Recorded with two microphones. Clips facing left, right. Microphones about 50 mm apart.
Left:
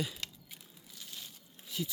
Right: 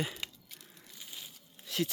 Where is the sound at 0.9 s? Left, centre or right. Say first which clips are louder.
Even; centre.